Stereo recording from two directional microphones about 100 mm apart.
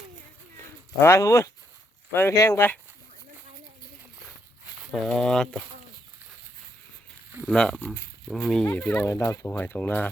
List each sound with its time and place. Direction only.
0.9 s speech: 30° left (ahead or behind)
4.9 s speech: centre (ahead or behind)
7.4 s speech: 5° left (ahead or behind)
8.3 s speech: 5° right (ahead or behind)
9.0 s speech: 25° left (ahead or behind)
9.5 s speech: 20° left (ahead or behind)